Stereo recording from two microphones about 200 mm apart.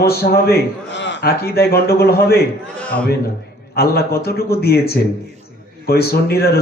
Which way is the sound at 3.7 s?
50° left (ahead or behind).